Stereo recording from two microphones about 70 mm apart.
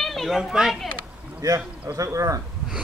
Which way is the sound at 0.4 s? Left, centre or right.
Centre.